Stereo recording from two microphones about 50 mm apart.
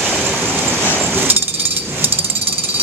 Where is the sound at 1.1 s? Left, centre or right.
Right.